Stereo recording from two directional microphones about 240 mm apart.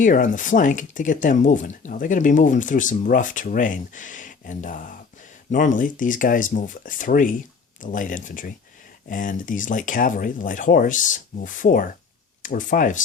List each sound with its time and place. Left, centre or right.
0.0 s speech: left